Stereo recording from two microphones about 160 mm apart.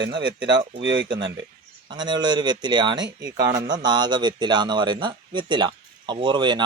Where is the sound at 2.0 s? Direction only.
30° right (ahead or behind).